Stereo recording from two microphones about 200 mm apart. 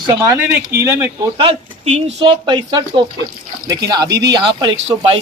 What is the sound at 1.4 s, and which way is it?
Speech, 30° right (ahead or behind).